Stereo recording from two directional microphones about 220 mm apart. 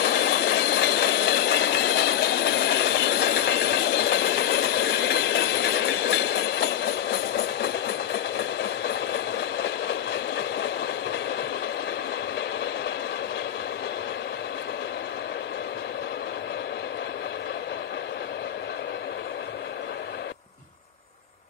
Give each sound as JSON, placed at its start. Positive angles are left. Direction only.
{"t": 0.0, "sound": "train", "side_deg": 50}